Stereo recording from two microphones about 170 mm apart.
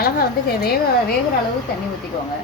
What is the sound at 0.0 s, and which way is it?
Speech, 60° left (ahead or behind).